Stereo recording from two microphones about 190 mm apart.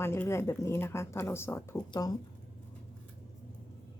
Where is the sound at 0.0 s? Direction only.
15° left (ahead or behind).